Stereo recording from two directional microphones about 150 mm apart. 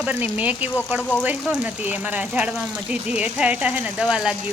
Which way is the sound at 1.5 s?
10° right (ahead or behind).